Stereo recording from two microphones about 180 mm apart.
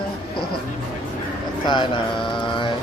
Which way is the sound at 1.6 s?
25° left (ahead or behind).